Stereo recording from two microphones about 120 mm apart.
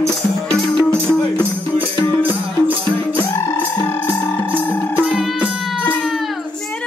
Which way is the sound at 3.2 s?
30° left (ahead or behind).